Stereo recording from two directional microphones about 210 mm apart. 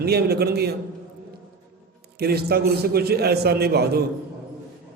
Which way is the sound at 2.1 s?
50° right (ahead or behind).